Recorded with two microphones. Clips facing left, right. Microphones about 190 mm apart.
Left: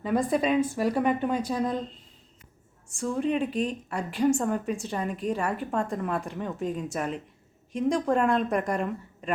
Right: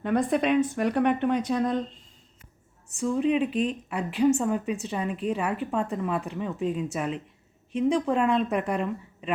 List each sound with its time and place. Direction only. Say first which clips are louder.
0.0 s a woman's voice: right 1 dB; centre (ahead or behind)
3.0 s a woman's voice: right 3 dB; centre (ahead or behind)
3.5 s speech: right 2 dB; 35° left (ahead or behind)
3.8 s a woman's voice: right 2 dB; 5° right (ahead or behind)